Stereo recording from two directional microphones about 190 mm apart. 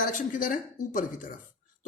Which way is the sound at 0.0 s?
45° left (ahead or behind).